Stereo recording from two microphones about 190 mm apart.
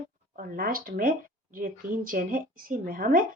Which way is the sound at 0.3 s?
50° right (ahead or behind).